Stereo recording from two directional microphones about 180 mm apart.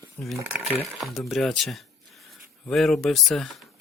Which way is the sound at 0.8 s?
Centre (ahead or behind).